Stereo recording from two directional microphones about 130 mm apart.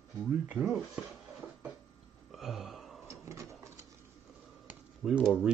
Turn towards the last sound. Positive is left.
turn(degrees=0)  # may be behind; listen again after turning